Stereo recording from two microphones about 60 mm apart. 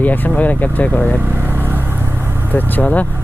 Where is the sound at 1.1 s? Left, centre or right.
Right.